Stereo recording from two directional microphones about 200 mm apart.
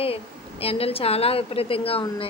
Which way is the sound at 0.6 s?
30° left (ahead or behind).